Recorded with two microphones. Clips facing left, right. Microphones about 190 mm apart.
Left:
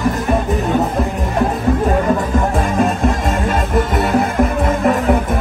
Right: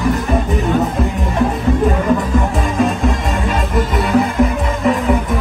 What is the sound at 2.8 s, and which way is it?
Music, 60° left (ahead or behind).